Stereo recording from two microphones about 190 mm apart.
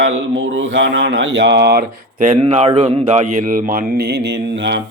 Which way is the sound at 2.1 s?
40° right (ahead or behind).